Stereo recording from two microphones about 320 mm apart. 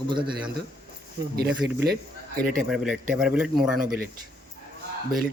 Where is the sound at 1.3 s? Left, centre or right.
Right.